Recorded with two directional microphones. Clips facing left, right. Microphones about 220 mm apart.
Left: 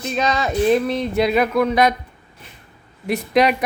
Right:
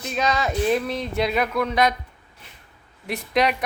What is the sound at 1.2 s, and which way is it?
Speech, 5° left (ahead or behind).